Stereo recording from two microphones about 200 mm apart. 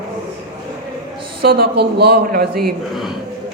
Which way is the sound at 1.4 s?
50° right (ahead or behind).